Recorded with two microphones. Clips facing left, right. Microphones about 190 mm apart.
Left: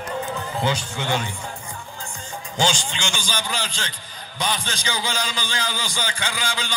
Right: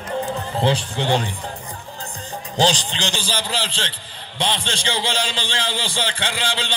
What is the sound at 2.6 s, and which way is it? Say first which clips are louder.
A man's voice: right 4 dB; 35° right (ahead or behind).